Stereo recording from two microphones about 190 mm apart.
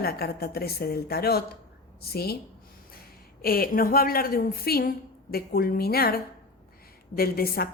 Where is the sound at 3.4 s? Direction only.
50° left (ahead or behind).